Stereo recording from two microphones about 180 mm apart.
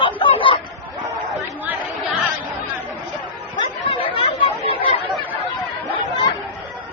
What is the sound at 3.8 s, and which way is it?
Chatter, 30° left (ahead or behind).